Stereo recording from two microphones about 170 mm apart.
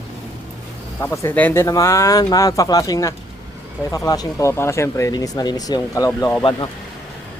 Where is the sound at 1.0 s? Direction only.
15° left (ahead or behind).